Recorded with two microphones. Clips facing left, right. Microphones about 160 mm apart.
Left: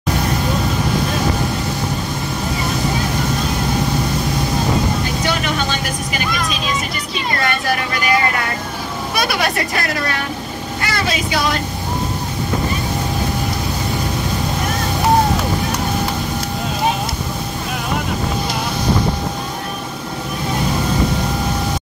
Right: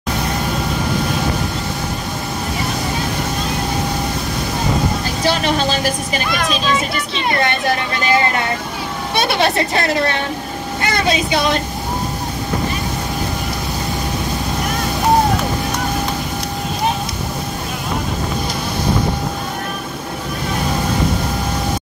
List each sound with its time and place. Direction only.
5.2 s vehicle: 30° right (ahead or behind)
7.3 s a woman's voice: 25° right (ahead or behind)
10.8 s vehicle: 20° right (ahead or behind)